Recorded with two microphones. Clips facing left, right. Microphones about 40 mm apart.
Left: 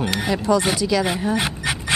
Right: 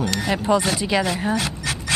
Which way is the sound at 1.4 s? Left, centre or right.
Left.